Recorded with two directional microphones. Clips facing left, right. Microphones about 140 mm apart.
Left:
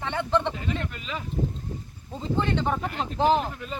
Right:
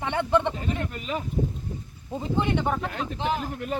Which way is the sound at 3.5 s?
50° right (ahead or behind).